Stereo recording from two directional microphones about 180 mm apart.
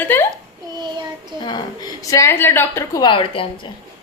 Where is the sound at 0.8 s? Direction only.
25° right (ahead or behind).